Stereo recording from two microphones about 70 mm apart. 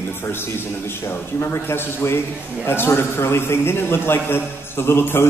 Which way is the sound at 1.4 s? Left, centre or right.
Left.